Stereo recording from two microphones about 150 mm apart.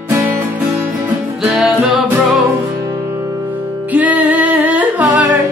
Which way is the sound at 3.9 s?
10° right (ahead or behind).